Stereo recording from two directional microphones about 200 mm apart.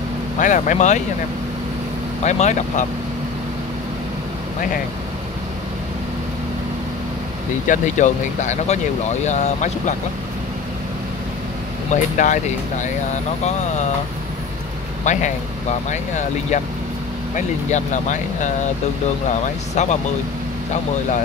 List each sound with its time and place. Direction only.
0.4 s speech: 40° left (ahead or behind)
2.2 s speech: 35° left (ahead or behind)
7.6 s speech: 40° left (ahead or behind)
11.9 s speech: 40° left (ahead or behind)
15.0 s speech: 35° left (ahead or behind)
17.6 s speech: 35° left (ahead or behind)
19.7 s speech: 35° left (ahead or behind)